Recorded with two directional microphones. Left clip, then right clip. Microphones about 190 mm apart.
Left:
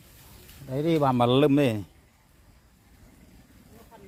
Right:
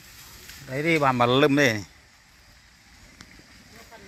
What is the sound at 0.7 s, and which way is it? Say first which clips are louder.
A man's voice: right 2 dB; 20° left (ahead or behind).